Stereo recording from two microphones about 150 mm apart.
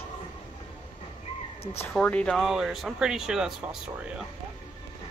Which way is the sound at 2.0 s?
5° left (ahead or behind).